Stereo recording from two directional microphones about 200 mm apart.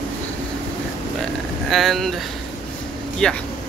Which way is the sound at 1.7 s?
Centre (ahead or behind).